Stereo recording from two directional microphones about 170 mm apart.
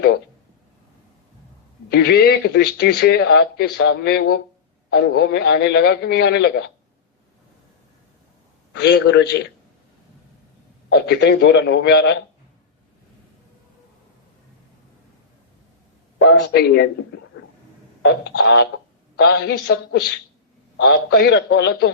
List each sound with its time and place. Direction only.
1.9 s a man's voice: 70° left (ahead or behind)
8.8 s a man's voice: 80° left
10.9 s a man's voice: 75° left (ahead or behind)
16.1 s a man's voice: 80° left
18.2 s a man's voice: 90° left
19.1 s a man's voice: 75° left (ahead or behind)